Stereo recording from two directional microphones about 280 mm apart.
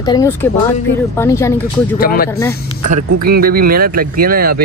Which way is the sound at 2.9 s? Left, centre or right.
Right.